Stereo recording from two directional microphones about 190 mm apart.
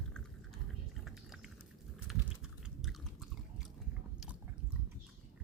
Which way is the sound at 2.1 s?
Centre (ahead or behind).